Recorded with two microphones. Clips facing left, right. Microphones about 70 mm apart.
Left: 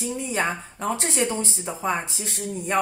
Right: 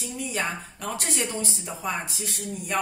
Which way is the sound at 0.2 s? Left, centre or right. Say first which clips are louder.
Left 2 dB; left.